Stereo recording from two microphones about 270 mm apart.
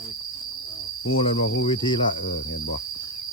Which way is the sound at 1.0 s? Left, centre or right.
Left.